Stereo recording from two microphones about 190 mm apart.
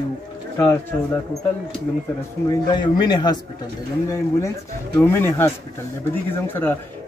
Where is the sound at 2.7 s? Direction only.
25° left (ahead or behind).